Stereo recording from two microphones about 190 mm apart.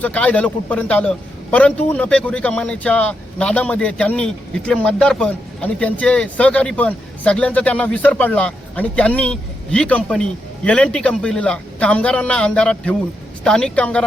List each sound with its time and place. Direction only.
0.0 s a man's voice: 5° left (ahead or behind)